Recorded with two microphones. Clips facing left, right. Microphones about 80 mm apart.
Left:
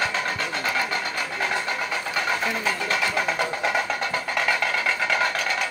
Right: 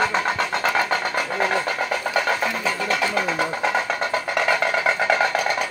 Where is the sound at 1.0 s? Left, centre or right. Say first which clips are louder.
Right 5 dB; right.